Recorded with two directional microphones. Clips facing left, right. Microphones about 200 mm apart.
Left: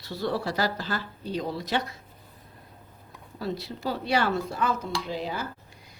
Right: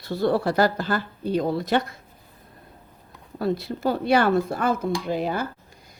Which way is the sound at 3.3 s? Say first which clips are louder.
Right 7 dB; 55° right (ahead or behind).